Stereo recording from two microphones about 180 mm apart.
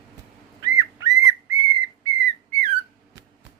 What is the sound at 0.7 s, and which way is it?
Bird, 20° right (ahead or behind).